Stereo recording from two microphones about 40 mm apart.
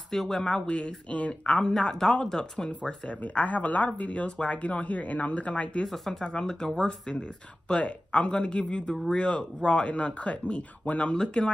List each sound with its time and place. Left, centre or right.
0.1 s speech: centre
0.7 s speech: left
1.6 s speech: centre
3.3 s speech: left
6.2 s speech: centre